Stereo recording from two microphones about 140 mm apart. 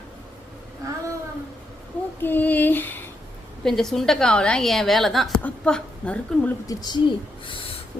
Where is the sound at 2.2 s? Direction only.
15° left (ahead or behind).